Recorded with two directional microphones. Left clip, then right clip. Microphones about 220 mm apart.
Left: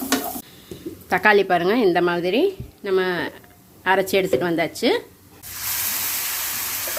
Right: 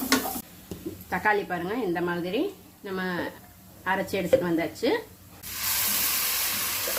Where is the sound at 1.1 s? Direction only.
45° left (ahead or behind).